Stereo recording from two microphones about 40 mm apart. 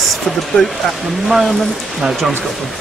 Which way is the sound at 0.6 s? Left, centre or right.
Centre.